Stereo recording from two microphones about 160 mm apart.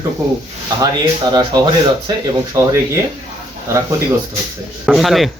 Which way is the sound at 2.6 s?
20° right (ahead or behind).